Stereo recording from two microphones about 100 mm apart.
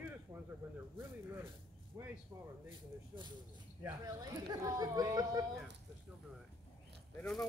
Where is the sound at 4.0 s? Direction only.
40° right (ahead or behind).